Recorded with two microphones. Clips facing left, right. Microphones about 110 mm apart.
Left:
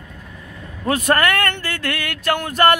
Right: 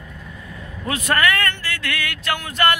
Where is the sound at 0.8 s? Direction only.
45° left (ahead or behind).